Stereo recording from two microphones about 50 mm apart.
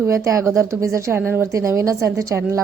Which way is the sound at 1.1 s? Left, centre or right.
Right.